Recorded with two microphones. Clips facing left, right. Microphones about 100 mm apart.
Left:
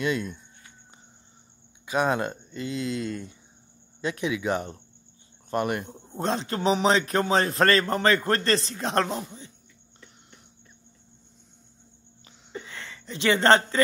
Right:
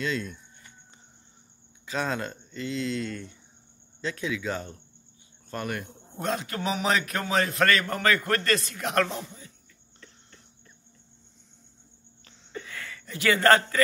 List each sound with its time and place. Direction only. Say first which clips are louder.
0.0 s speech: left 3 dB; 15° left (ahead or behind)
1.9 s a man's voice: left 5 dB; 15° left (ahead or behind)
5.9 s a man's voice: left 2 dB; 30° left (ahead or behind)
12.5 s a sound: even; 25° left (ahead or behind)